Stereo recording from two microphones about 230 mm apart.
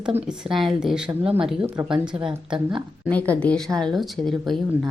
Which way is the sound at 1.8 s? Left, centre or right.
Centre.